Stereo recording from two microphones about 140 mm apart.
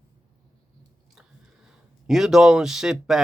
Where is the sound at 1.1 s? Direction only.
Centre (ahead or behind).